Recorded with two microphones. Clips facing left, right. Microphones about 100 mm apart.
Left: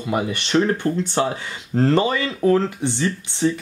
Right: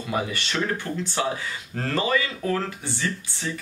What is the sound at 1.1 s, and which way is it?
Speech, 35° left (ahead or behind).